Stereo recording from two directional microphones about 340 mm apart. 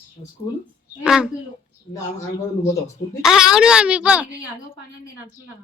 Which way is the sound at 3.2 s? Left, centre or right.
Centre.